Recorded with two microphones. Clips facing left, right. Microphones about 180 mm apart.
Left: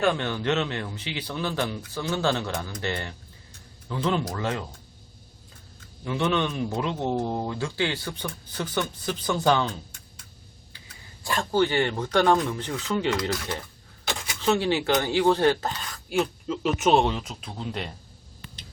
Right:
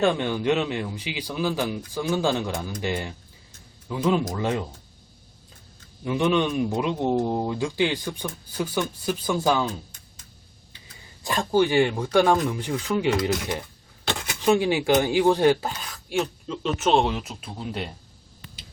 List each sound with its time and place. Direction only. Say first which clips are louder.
0.0 s speech: right 3 dB; 15° right (ahead or behind)
6.1 s speech: right 3 dB; 15° right (ahead or behind)
11.2 s speech: right 2 dB; 15° right (ahead or behind)
15.9 s speech: left 1 dB; centre (ahead or behind)